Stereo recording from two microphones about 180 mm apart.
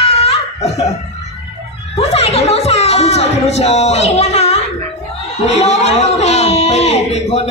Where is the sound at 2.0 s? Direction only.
35° left (ahead or behind).